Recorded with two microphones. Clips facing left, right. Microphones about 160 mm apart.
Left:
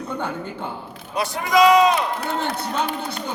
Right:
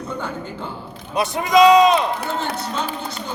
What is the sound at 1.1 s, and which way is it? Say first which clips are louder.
Speech: right 3 dB; 20° right (ahead or behind).